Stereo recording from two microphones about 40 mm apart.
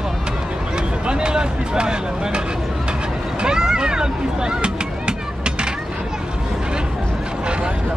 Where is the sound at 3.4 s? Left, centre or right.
Centre.